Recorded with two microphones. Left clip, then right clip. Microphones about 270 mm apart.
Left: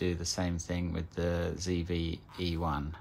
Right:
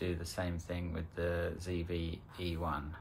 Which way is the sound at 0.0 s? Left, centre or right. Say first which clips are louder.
Left 5 dB; left.